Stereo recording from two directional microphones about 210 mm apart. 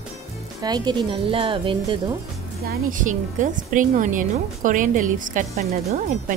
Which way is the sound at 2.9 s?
40° right (ahead or behind).